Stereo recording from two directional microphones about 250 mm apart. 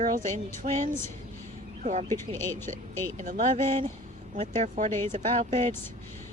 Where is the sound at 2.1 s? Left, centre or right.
Centre.